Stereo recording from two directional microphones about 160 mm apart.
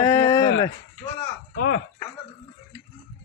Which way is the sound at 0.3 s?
20° left (ahead or behind).